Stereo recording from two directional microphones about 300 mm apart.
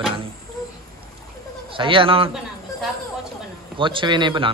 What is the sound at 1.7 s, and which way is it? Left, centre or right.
Speech, centre.